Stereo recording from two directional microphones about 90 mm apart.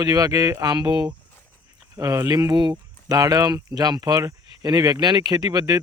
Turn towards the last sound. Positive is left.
turn(degrees=-45)  # may be behind; listen again after turning